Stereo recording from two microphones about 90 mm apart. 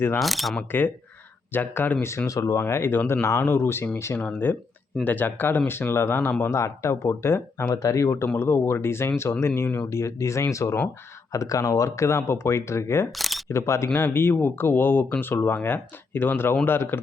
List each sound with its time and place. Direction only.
0.2 s speech: centre (ahead or behind)
0.7 s speech: 20° left (ahead or behind)
7.7 s speech: 35° left (ahead or behind)
13.1 s single-lens reflex camera: centre (ahead or behind)
13.5 s speech: 30° left (ahead or behind)